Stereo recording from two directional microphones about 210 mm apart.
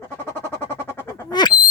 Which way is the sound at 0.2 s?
10° left (ahead or behind).